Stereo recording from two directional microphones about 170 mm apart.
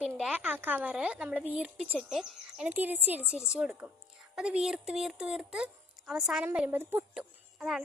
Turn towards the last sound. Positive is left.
turn(degrees=-5)  # may be behind; listen again after turning